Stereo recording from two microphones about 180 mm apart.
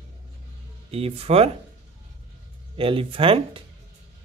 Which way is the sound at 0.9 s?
35° right (ahead or behind).